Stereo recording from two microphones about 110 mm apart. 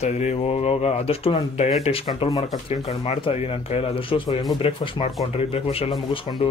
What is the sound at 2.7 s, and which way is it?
Speech, 75° left (ahead or behind).